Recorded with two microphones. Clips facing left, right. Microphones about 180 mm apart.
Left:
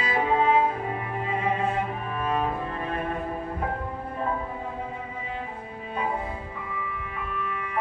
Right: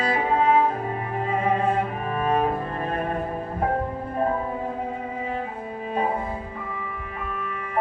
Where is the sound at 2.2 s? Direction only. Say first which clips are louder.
Right 4 dB; 45° right (ahead or behind).